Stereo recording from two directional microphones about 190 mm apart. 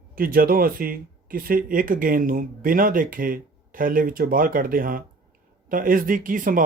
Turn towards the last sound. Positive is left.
turn(degrees=-45)  # may be behind; listen again after turning